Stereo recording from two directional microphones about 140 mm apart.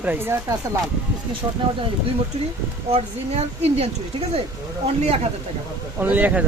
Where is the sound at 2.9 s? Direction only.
50° right (ahead or behind).